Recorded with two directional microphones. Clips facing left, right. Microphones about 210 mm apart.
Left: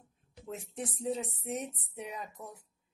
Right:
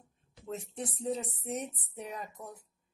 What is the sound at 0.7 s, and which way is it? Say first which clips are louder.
A woman's voice: left 1 dB; centre (ahead or behind).